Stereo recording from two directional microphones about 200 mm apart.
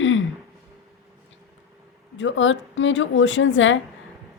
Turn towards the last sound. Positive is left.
turn(degrees=70)  # may be behind; listen again after turning